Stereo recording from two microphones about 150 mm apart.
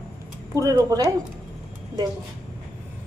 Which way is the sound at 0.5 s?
20° right (ahead or behind).